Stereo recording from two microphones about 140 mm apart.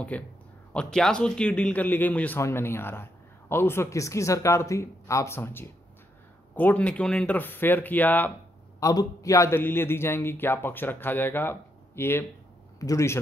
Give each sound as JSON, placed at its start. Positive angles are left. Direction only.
{"t": 0.1, "sound": "a man's voice", "side_deg": 10}
{"t": 8.7, "sound": "a man's voice", "side_deg": 25}